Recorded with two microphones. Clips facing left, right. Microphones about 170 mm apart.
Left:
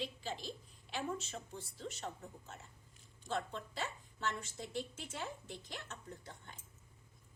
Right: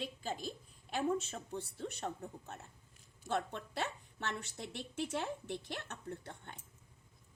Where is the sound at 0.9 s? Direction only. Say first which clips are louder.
Right 6 dB; 60° right (ahead or behind).